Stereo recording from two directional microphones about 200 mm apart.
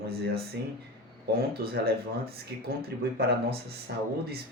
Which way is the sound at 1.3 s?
50° right (ahead or behind).